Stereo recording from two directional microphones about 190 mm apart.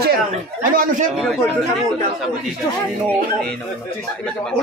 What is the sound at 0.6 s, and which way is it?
Speech, 45° right (ahead or behind).